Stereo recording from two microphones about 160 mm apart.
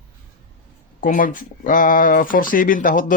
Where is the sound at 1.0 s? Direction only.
60° left (ahead or behind).